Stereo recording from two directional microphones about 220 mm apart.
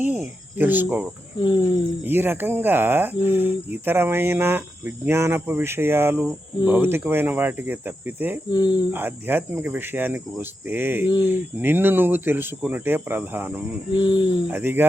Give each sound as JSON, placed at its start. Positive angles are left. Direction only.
{"t": 0.0, "sound": "speech", "side_deg": -10}
{"t": 1.4, "sound": "speech", "side_deg": 20}
{"t": 2.0, "sound": "speech", "side_deg": -10}
{"t": 8.4, "sound": "speech", "side_deg": 20}
{"t": 8.9, "sound": "speech", "side_deg": -10}
{"t": 13.9, "sound": "speech", "side_deg": 20}
{"t": 14.5, "sound": "speech", "side_deg": -10}